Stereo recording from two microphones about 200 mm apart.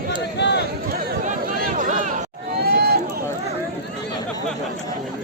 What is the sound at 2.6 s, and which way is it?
Run, 55° right (ahead or behind).